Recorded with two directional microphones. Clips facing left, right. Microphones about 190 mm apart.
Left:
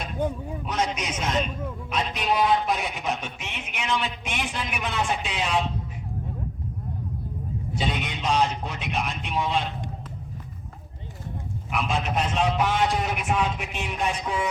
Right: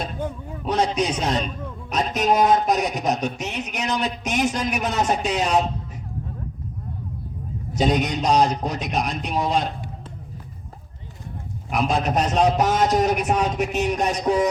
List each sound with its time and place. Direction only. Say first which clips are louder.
0.2 s speech: left 2 dB; 15° left (ahead or behind)
0.6 s speech: right 7 dB; 35° right (ahead or behind)
7.7 s speech: right 9 dB; 40° right (ahead or behind)
11.7 s speech: right 5 dB; 40° right (ahead or behind)